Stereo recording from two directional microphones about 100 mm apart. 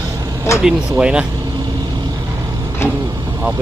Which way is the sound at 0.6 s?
10° right (ahead or behind).